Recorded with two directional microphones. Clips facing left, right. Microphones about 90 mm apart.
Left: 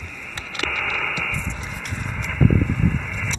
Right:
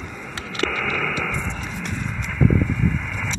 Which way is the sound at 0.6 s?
Centre (ahead or behind).